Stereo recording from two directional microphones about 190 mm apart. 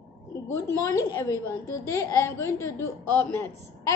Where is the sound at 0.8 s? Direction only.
15° left (ahead or behind).